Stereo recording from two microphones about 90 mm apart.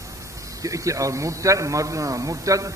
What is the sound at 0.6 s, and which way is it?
A man's voice, 35° right (ahead or behind).